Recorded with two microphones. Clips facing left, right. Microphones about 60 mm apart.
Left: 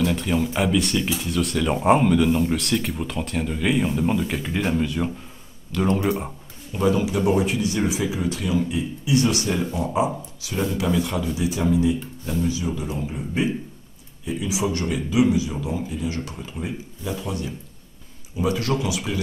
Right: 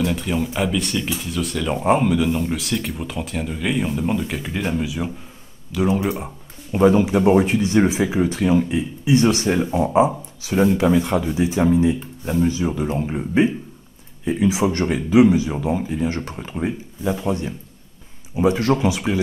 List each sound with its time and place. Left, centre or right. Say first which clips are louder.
0.0 s speech: even; centre
6.7 s speech: right 6 dB; right